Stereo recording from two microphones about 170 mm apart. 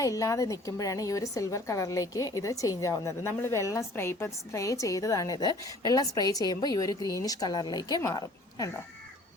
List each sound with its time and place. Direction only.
0.0 s a woman's voice: 20° left (ahead or behind)